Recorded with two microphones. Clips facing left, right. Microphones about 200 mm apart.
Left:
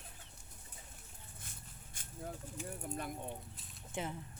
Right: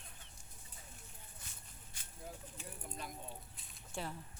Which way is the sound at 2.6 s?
55° left (ahead or behind).